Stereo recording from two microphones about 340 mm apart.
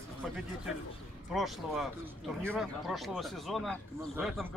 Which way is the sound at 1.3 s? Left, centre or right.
Centre.